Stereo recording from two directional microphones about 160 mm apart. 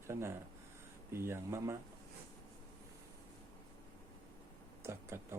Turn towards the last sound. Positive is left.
turn(degrees=-15)  # may be behind; listen again after turning